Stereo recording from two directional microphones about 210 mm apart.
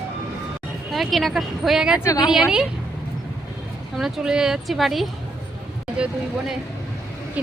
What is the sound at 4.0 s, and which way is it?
Speech, centre (ahead or behind).